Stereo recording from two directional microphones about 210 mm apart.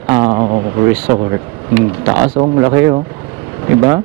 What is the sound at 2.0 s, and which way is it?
Speech, 25° right (ahead or behind).